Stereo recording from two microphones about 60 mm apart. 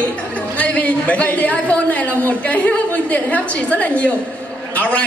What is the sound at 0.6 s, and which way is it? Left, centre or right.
A man's voice, left.